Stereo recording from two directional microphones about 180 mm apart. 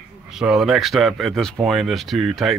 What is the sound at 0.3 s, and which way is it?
Speech, centre (ahead or behind).